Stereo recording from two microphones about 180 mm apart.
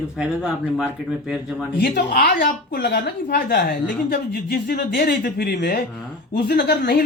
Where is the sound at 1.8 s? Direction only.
55° left (ahead or behind).